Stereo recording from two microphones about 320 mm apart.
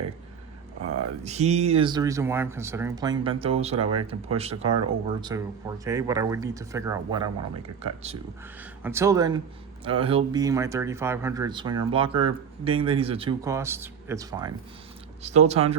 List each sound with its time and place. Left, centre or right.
1.2 s speech: right
8.8 s speech: centre